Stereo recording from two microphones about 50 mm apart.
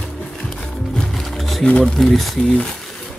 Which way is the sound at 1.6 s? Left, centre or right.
Left.